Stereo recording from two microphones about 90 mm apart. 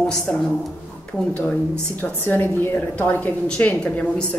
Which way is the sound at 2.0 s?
20° left (ahead or behind).